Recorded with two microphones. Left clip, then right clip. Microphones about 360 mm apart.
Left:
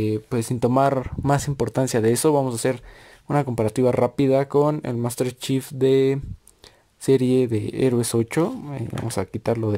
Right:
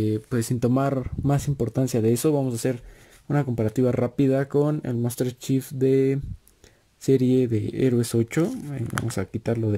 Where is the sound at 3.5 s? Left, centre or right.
Centre.